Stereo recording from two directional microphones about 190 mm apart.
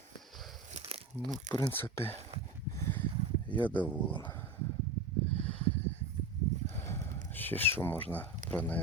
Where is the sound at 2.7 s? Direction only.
15° left (ahead or behind).